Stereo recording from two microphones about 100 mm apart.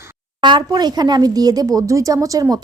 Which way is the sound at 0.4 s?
45° right (ahead or behind).